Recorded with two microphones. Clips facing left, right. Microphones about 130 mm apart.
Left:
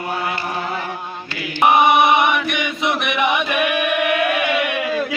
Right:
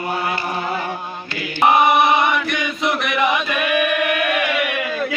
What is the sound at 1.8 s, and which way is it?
Chant, 20° left (ahead or behind).